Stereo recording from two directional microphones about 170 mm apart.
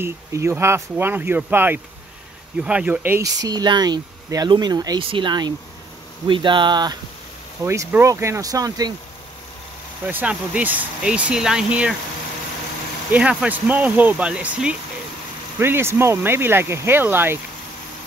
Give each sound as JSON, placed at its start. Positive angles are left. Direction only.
{"t": 0.0, "sound": "speech", "side_deg": -15}
{"t": 3.3, "sound": "speech", "side_deg": -25}
{"t": 10.0, "sound": "speech", "side_deg": -10}
{"t": 13.1, "sound": "speech", "side_deg": -5}